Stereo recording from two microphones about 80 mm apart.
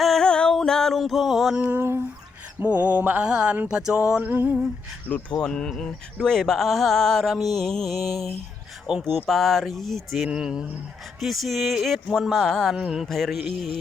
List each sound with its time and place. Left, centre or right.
0.0 s music: centre
1.5 s a sound: centre
1.8 s a sound: right
2.6 s mantra: centre
5.4 s speech: centre
6.2 s music: centre
10.2 s mantra: centre
11.2 s music: centre
12.7 s mantra: centre
13.1 s music: centre